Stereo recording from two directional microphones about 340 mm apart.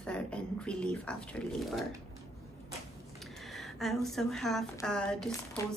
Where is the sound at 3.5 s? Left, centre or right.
Centre.